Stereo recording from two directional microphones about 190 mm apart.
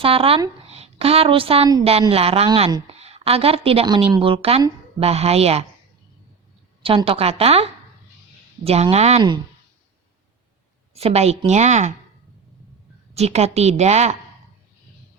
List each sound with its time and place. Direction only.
0.0 s a woman's voice: 30° right (ahead or behind)
6.8 s a woman's voice: 30° right (ahead or behind)
10.9 s a woman's voice: 35° right (ahead or behind)
13.1 s a woman's voice: 35° right (ahead or behind)